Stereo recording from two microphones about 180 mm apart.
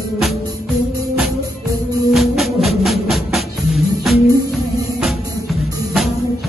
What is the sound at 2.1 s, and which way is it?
Music, centre (ahead or behind).